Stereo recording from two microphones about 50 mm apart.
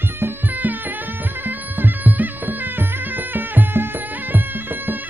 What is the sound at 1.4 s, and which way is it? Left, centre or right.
Music, right.